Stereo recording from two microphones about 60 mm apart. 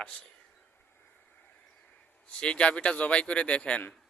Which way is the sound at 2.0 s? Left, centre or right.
Centre.